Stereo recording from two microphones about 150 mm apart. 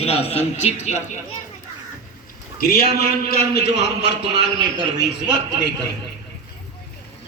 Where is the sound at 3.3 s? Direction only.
90° left.